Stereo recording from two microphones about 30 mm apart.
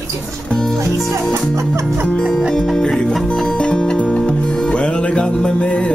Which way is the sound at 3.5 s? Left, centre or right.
Left.